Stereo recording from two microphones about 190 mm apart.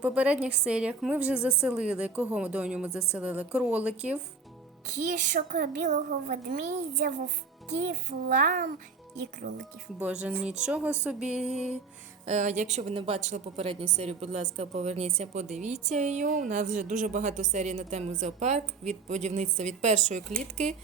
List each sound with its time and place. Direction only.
0.0 s a woman's voice: 5° right (ahead or behind)
4.9 s a woman's voice: 40° right (ahead or behind)
8.4 s speech: 45° right (ahead or behind)
10.0 s a woman's voice: 5° right (ahead or behind)
12.2 s a woman's voice: 35° right (ahead or behind)